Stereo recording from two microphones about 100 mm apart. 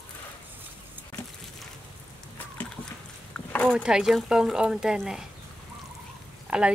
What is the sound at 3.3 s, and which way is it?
Rowboat, 10° left (ahead or behind).